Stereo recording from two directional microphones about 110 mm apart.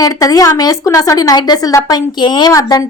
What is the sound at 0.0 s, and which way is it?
A woman's voice, 35° left (ahead or behind).